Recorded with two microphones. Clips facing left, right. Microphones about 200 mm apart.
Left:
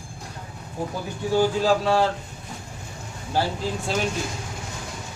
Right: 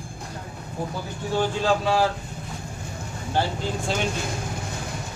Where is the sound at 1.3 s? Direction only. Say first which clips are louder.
Left 3 dB; 5° left (ahead or behind).